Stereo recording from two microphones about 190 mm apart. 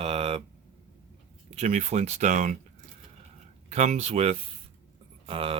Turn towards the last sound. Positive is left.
turn(degrees=-30)  # may be behind; listen again after turning